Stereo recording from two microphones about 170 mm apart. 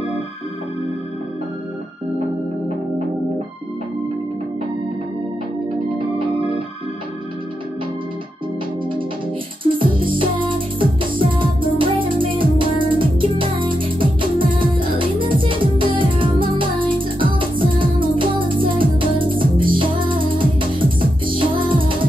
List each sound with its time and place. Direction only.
5.9 s organ: 30° right (ahead or behind)
9.6 s music: 30° right (ahead or behind)
12.7 s music: 55° right (ahead or behind)
13.2 s music: 30° right (ahead or behind)